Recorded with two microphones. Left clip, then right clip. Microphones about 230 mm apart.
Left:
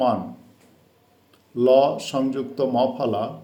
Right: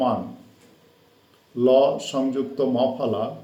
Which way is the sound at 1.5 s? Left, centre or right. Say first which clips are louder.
Left 1 dB; left.